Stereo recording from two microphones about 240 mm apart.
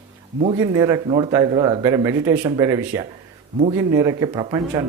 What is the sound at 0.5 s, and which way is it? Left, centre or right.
Speech, centre.